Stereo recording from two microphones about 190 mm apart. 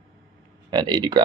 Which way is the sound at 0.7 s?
20° right (ahead or behind).